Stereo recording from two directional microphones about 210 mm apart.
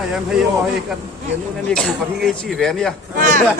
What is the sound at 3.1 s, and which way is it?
Chatter, 40° right (ahead or behind).